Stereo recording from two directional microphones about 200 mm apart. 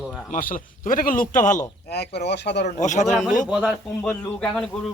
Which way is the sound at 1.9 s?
55° left (ahead or behind).